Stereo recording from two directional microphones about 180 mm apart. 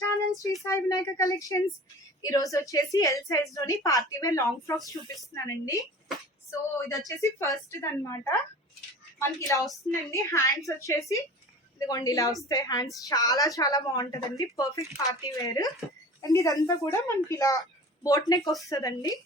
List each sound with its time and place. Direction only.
0.0 s a woman's voice: 15° left (ahead or behind)